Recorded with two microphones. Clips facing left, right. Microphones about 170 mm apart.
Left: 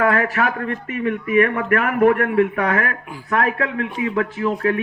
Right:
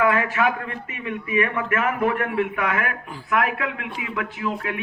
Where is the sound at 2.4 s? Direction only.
35° left (ahead or behind).